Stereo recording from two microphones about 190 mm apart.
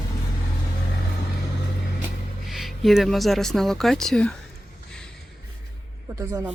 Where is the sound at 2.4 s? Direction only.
Centre (ahead or behind).